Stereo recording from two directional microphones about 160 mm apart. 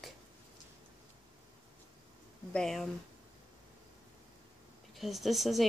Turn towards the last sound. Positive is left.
turn(degrees=0)  # may be behind; listen again after turning